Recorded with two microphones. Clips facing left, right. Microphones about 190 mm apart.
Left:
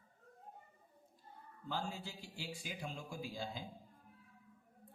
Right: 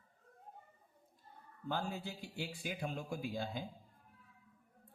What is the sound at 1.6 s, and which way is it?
A man's voice, 55° right (ahead or behind).